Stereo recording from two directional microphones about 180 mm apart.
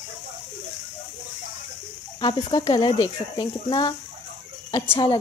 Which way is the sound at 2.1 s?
25° left (ahead or behind).